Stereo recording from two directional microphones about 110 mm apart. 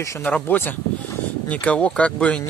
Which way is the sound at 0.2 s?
15° left (ahead or behind).